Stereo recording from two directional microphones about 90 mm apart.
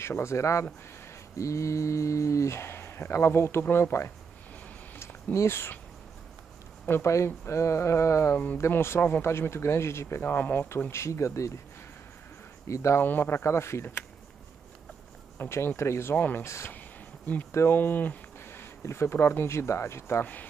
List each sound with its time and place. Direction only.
0.0 s speech: 30° left (ahead or behind)
4.9 s a sound: 30° left (ahead or behind)
6.9 s speech: 30° left (ahead or behind)
12.6 s speech: 35° left (ahead or behind)
13.0 s speech: 25° left (ahead or behind)
15.3 s speech: 30° left (ahead or behind)
16.4 s speech: 30° left (ahead or behind)
17.7 s speech: 20° left (ahead or behind)